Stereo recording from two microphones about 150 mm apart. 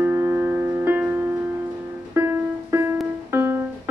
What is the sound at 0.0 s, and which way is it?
Music, 15° right (ahead or behind).